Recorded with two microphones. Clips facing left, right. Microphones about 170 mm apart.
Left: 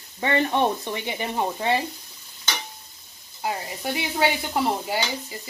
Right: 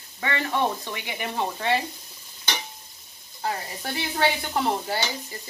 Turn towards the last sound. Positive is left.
turn(degrees=10)  # may be behind; listen again after turning